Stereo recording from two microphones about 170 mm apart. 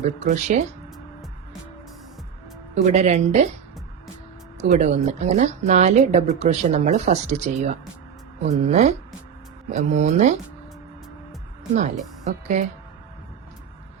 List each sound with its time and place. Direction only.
0.3 s a woman's voice: 45° right (ahead or behind)
2.7 s a woman's voice: 45° right (ahead or behind)
4.6 s a woman's voice: 40° right (ahead or behind)
11.7 s a woman's voice: 45° right (ahead or behind)